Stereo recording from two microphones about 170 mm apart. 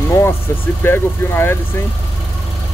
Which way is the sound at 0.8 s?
15° left (ahead or behind).